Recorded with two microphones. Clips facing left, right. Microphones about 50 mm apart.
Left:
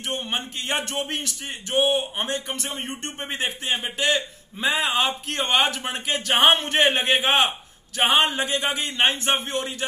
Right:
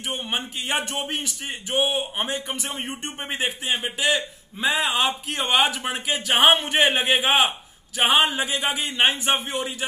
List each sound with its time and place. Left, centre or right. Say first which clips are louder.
0.1 s speech: even; centre